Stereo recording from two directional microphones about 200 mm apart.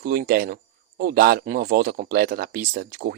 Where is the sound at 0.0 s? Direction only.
50° right (ahead or behind).